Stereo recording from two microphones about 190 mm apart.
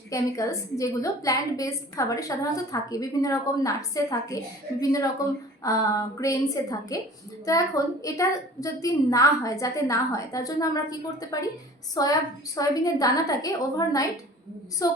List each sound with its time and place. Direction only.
0.1 s a woman's voice: 15° left (ahead or behind)